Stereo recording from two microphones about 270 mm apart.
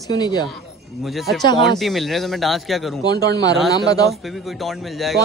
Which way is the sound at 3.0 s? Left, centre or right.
Centre.